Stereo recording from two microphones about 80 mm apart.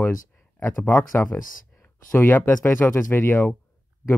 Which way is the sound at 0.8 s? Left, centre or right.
Left.